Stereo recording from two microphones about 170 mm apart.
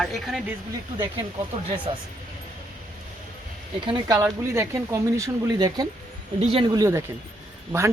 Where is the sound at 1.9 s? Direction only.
30° right (ahead or behind).